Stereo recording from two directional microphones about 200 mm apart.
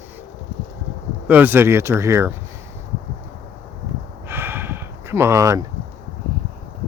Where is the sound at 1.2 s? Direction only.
10° right (ahead or behind).